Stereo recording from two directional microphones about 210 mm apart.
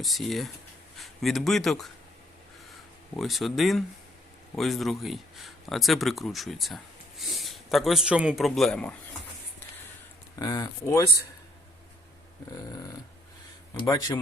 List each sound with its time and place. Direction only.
0.0 s speech: centre (ahead or behind)
3.2 s speech: centre (ahead or behind)
10.3 s speech: 20° left (ahead or behind)
13.7 s speech: 15° left (ahead or behind)